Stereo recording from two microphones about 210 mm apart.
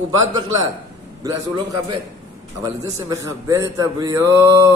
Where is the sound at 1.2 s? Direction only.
15° right (ahead or behind).